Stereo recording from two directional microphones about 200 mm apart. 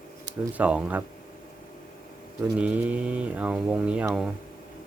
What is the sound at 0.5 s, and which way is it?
Speech, 5° right (ahead or behind).